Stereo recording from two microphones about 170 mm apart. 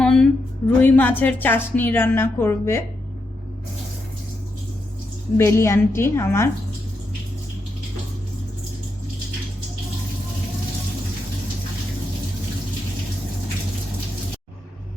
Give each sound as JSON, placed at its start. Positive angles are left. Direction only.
{"t": 0.0, "sound": "a sound", "side_deg": 5}
{"t": 0.8, "sound": "a woman's voice", "side_deg": 10}
{"t": 5.4, "sound": "a woman's voice", "side_deg": 15}